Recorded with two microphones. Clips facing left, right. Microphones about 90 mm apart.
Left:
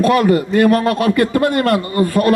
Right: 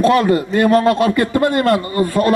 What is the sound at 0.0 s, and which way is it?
A man's voice, 30° right (ahead or behind).